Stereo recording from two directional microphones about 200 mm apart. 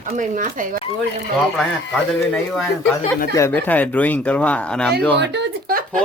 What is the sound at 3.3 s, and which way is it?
Speech, 10° left (ahead or behind).